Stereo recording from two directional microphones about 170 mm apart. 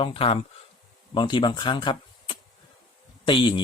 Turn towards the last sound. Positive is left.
turn(degrees=30)  # may be behind; listen again after turning